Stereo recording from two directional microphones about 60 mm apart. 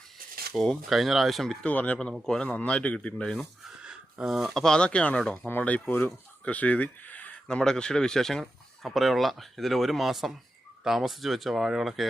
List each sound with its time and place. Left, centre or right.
0.5 s speech: centre
1.6 s speech: left
2.1 s speech: centre
2.4 s speech: centre
3.8 s a sound: centre
4.3 s speech: centre
5.5 s speech: left
6.4 s speech: left
7.4 s speech: centre